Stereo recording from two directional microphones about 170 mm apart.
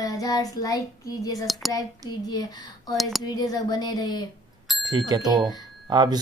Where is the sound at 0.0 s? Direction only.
20° left (ahead or behind).